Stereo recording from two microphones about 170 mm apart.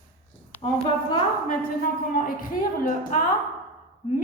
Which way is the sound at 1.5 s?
55° left (ahead or behind).